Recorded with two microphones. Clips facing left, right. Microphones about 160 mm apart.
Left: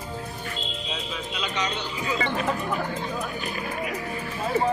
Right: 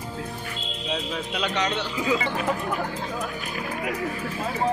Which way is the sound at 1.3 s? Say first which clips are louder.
Right 4 dB; 65° right (ahead or behind).